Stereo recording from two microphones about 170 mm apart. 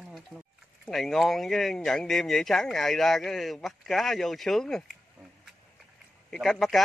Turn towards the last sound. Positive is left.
turn(degrees=0)  # may be behind; listen again after turning